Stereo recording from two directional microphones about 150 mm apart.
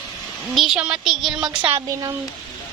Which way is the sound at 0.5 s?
Centre (ahead or behind).